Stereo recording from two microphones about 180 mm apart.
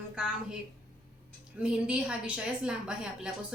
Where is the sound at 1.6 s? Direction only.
5° right (ahead or behind).